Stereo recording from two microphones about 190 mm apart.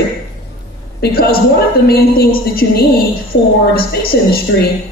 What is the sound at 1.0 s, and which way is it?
A man's voice, 55° left (ahead or behind).